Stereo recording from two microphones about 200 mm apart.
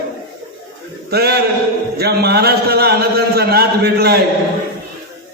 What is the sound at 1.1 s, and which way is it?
A man's voice, 55° right (ahead or behind).